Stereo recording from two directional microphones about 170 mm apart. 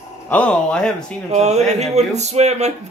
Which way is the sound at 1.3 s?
40° right (ahead or behind).